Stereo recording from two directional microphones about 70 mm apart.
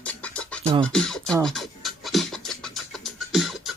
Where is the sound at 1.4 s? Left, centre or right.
Centre.